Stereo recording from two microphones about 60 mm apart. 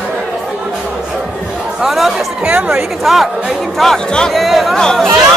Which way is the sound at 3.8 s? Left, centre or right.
Centre.